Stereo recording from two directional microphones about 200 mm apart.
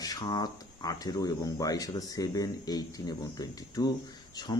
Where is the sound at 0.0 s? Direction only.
20° left (ahead or behind).